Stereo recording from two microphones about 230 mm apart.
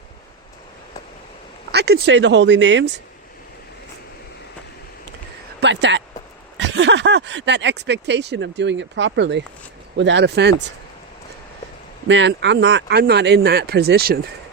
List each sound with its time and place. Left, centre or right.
1.7 s speech: right
5.5 s speech: right
12.0 s speech: right